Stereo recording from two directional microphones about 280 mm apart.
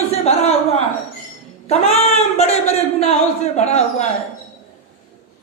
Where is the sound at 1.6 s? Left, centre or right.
Left.